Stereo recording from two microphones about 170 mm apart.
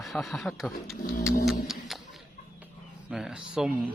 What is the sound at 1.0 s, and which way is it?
Pigeon, 60° left (ahead or behind).